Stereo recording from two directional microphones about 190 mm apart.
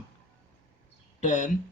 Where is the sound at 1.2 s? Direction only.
40° left (ahead or behind).